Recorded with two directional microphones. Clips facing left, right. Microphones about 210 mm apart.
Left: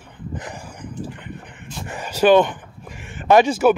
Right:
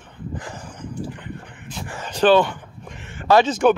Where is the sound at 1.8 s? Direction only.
20° left (ahead or behind).